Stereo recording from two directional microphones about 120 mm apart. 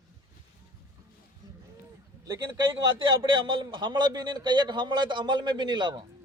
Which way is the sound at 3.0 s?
40° right (ahead or behind).